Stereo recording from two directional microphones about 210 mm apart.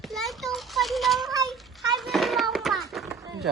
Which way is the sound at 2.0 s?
Centre (ahead or behind).